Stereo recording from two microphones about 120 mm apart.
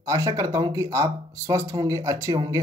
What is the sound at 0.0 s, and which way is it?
Speech, 30° right (ahead or behind).